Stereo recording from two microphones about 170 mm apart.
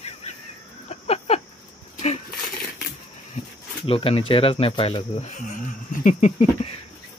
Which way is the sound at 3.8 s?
35° left (ahead or behind).